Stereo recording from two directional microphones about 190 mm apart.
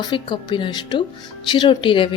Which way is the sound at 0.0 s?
25° left (ahead or behind).